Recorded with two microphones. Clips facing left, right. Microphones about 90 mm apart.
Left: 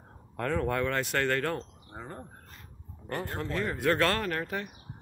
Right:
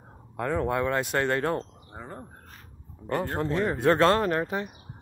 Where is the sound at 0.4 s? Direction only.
15° right (ahead or behind).